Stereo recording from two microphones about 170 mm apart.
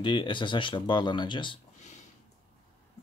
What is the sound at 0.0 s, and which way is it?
Speech, 30° left (ahead or behind).